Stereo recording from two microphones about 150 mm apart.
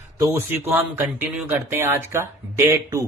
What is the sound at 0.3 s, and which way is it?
Speech, 15° right (ahead or behind).